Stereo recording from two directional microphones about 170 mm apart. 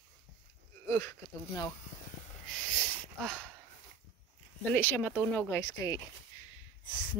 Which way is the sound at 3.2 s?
Centre (ahead or behind).